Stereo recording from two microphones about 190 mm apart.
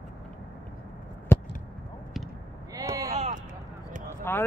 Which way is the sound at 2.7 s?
20° right (ahead or behind).